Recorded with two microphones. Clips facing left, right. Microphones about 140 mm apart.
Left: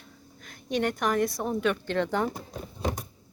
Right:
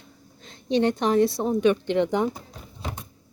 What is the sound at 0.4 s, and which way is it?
A woman's voice, 25° right (ahead or behind).